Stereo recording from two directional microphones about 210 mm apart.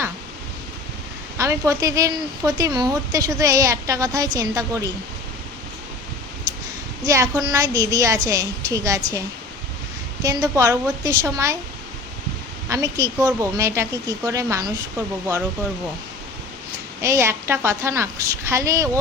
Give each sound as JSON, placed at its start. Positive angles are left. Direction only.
{"t": 1.4, "sound": "speech", "side_deg": -15}
{"t": 7.0, "sound": "speech", "side_deg": -15}
{"t": 10.2, "sound": "speech", "side_deg": -15}
{"t": 12.6, "sound": "speech", "side_deg": -15}
{"t": 17.0, "sound": "speech", "side_deg": -15}